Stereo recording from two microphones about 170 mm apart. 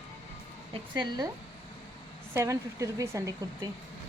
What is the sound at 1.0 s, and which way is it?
Speech, 25° right (ahead or behind).